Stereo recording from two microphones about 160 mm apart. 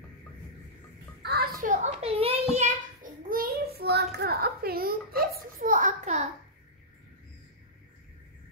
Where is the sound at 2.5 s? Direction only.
55° right (ahead or behind).